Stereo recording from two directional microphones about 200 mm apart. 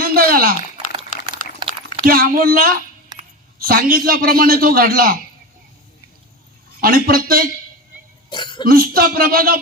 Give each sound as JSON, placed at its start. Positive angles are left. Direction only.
{"t": 0.0, "sound": "a sound", "side_deg": -45}
{"t": 2.0, "sound": "a man's voice", "side_deg": -45}
{"t": 6.8, "sound": "a man's voice", "side_deg": -45}
{"t": 8.3, "sound": "speech", "side_deg": 25}
{"t": 8.6, "sound": "a man's voice", "side_deg": -45}